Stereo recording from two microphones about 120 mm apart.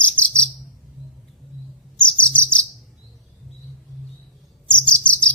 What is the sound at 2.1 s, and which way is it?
Chirp, 10° left (ahead or behind).